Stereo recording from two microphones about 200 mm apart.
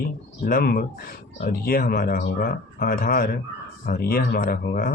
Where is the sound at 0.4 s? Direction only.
45° left (ahead or behind).